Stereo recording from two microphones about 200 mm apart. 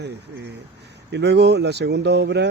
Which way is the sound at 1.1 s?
60° right (ahead or behind).